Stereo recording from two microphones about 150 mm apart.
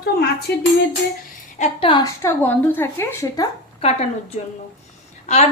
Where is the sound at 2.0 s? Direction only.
20° left (ahead or behind).